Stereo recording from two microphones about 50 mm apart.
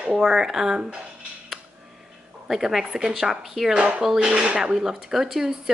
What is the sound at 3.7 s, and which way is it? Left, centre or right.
A woman's voice, centre.